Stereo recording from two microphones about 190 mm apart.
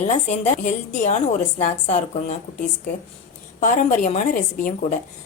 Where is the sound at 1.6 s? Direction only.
40° left (ahead or behind).